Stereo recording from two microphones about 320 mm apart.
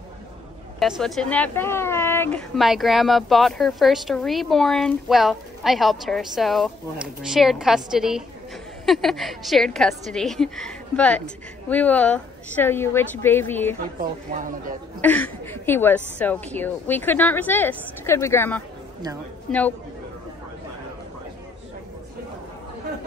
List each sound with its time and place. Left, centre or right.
0.7 s a woman's voice: centre
13.9 s speech: right
15.0 s a woman's voice: centre